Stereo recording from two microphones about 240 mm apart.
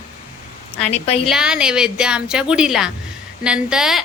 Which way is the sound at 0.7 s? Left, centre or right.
Left.